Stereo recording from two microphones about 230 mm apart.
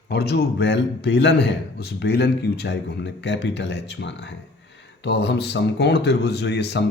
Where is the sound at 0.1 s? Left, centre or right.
Left.